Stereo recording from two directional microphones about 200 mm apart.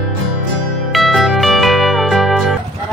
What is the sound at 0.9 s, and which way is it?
Music, centre (ahead or behind).